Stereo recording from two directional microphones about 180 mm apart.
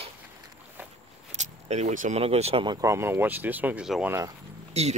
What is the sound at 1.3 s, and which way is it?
Speech, 40° right (ahead or behind).